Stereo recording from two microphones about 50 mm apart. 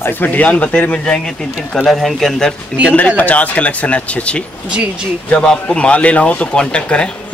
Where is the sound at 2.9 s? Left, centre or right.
Left.